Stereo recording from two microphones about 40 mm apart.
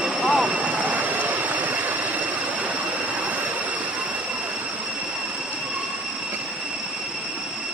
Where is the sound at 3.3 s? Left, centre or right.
Right.